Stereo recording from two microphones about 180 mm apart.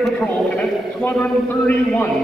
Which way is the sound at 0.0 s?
5° left (ahead or behind).